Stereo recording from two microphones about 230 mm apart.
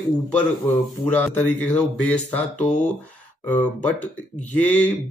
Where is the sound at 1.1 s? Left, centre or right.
Centre.